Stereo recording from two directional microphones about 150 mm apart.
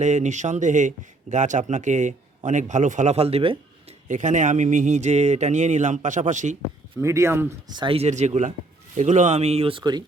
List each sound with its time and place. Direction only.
0.0 s speech: 50° right (ahead or behind)
4.1 s speech: 55° right (ahead or behind)
6.9 s speech: 20° right (ahead or behind)
7.7 s speech: 35° right (ahead or behind)